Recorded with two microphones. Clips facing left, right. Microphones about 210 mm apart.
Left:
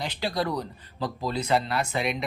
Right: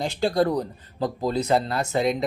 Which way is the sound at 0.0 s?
50° right (ahead or behind).